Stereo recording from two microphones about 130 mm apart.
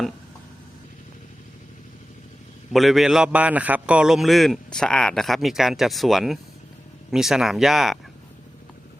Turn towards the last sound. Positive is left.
turn(degrees=0)  # may be behind; listen again after turning